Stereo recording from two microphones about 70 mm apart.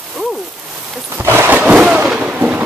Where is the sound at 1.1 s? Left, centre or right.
Right.